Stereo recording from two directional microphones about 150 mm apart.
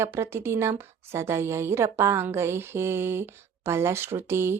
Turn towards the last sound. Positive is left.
turn(degrees=-15)  # may be behind; listen again after turning